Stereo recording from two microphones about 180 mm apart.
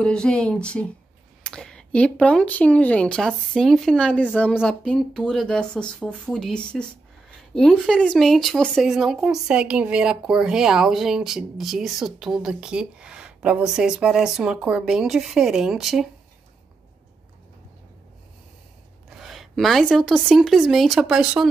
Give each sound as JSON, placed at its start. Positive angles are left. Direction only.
{"t": 0.0, "sound": "speech", "side_deg": 5}
{"t": 19.0, "sound": "speech", "side_deg": 0}